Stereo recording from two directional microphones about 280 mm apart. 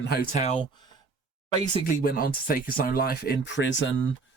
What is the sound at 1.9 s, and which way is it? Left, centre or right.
Speech, left.